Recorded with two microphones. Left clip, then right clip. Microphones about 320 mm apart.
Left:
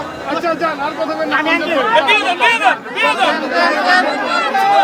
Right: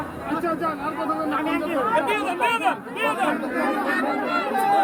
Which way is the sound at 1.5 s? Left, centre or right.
Left.